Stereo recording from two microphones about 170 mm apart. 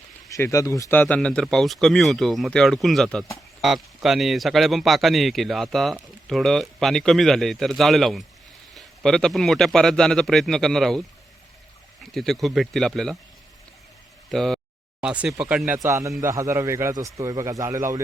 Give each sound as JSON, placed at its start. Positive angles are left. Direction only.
{"t": 0.3, "sound": "speech", "side_deg": 20}
{"t": 12.1, "sound": "speech", "side_deg": 0}
{"t": 14.3, "sound": "a man's voice", "side_deg": 0}